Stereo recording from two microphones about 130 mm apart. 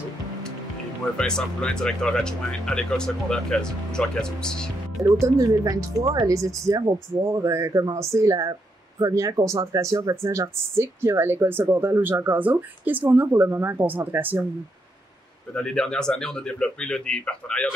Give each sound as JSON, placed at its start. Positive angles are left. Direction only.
{"t": 1.1, "sound": "speech", "side_deg": 5}
{"t": 5.2, "sound": "speech", "side_deg": -25}
{"t": 15.5, "sound": "speech", "side_deg": 5}